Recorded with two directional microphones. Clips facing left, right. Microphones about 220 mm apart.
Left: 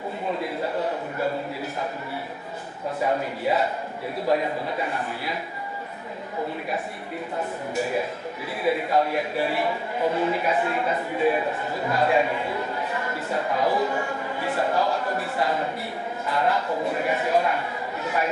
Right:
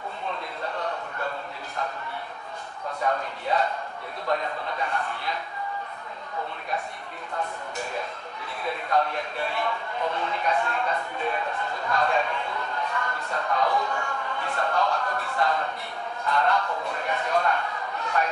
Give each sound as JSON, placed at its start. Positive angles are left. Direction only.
{"t": 0.3, "sound": "a sound", "side_deg": 5}
{"t": 3.2, "sound": "a man's voice", "side_deg": 5}
{"t": 8.6, "sound": "a man's voice", "side_deg": 5}
{"t": 13.7, "sound": "speech", "side_deg": 25}
{"t": 14.3, "sound": "a man's voice", "side_deg": 5}
{"t": 18.0, "sound": "chatter", "side_deg": 5}